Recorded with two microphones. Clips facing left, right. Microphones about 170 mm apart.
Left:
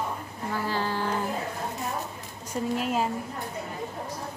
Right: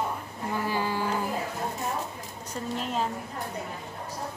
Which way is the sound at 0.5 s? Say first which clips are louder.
Even; 15° right (ahead or behind).